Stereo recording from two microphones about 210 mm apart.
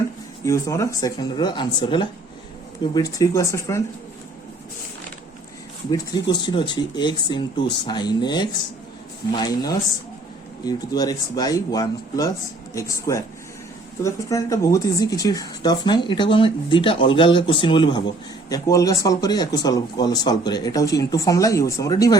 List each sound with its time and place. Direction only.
0.4 s speech: 15° left (ahead or behind)
5.9 s speech: 20° left (ahead or behind)